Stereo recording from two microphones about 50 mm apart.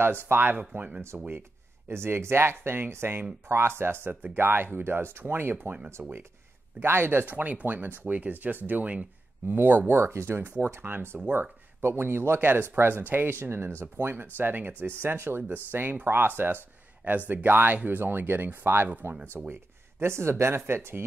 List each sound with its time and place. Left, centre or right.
0.3 s speech: right
1.1 s speech: right
1.9 s speech: right
6.0 s speech: right
6.8 s a man's voice: right
12.4 s speech: right